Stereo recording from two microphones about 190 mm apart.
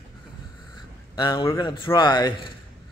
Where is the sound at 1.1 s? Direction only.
25° left (ahead or behind).